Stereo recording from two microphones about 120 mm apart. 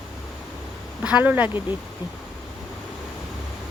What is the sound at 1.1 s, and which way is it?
Speech, 10° right (ahead or behind).